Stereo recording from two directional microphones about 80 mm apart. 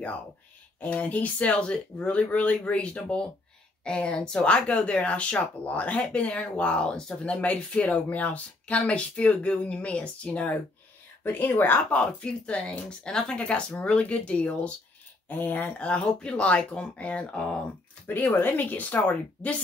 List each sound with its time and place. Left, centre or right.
0.7 s speech: centre